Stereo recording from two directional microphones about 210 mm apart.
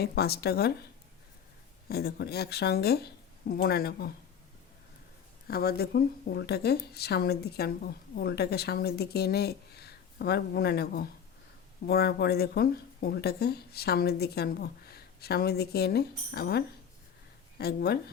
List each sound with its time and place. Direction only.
0.0 s speech: 50° left (ahead or behind)
1.9 s speech: 50° left (ahead or behind)
5.5 s speech: 45° left (ahead or behind)